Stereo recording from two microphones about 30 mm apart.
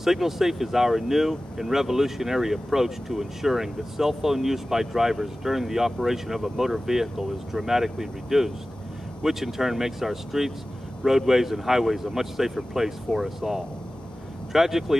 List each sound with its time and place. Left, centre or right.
0.0 s speech: centre